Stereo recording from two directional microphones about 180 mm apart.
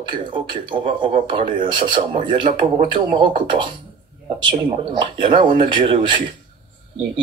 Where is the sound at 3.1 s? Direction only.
25° right (ahead or behind).